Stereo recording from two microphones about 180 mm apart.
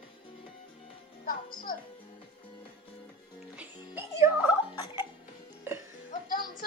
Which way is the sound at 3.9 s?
15° right (ahead or behind).